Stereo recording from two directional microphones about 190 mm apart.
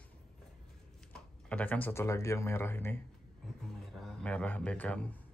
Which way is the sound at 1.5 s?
10° left (ahead or behind).